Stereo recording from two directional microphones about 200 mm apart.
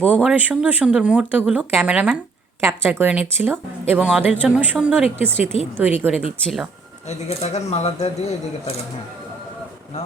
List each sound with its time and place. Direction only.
0.0 s a woman's voice: 5° right (ahead or behind)
7.1 s speech: 35° left (ahead or behind)